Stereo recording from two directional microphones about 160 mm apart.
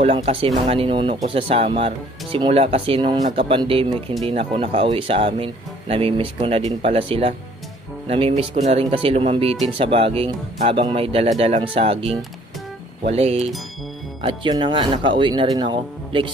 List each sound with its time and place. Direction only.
0.0 s speech: 35° right (ahead or behind)
14.2 s speech: 30° right (ahead or behind)